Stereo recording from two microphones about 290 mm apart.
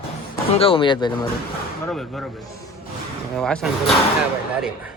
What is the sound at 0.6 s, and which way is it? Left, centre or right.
Speech, centre.